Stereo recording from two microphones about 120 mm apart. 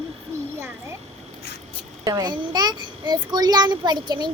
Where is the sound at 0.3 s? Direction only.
25° right (ahead or behind).